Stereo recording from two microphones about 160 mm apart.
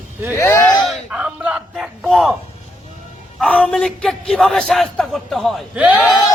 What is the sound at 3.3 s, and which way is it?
A man's voice, 5° left (ahead or behind).